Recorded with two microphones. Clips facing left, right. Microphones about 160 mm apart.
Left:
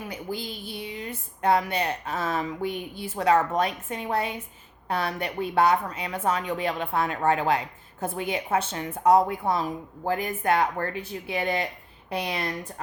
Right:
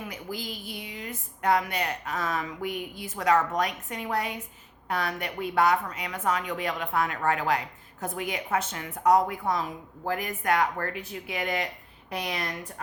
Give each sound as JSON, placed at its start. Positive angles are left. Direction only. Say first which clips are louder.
{"t": 0.0, "sound": "a woman's voice", "louder": "left 3 dB", "side_deg": 30}